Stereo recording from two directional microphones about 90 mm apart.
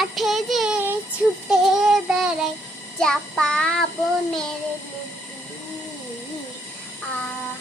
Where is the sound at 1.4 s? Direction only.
5° right (ahead or behind).